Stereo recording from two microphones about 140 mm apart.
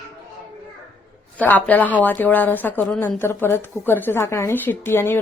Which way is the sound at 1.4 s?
10° left (ahead or behind).